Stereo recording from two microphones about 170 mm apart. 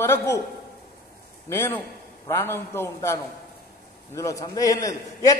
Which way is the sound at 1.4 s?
15° left (ahead or behind).